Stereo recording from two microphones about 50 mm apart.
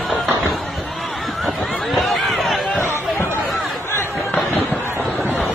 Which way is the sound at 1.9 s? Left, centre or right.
Centre.